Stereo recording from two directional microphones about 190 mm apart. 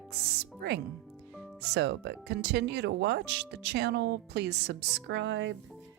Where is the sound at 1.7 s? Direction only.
65° right (ahead or behind).